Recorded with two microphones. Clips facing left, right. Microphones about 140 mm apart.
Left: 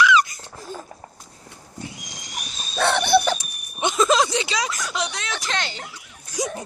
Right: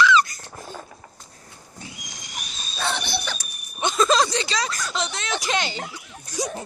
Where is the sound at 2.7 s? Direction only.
60° left (ahead or behind).